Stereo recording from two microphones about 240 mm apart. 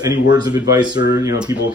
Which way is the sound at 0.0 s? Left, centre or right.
Centre.